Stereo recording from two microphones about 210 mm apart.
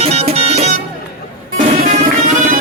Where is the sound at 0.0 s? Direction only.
30° right (ahead or behind).